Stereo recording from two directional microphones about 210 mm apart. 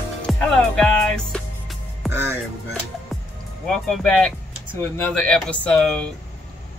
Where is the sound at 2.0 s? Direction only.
10° right (ahead or behind).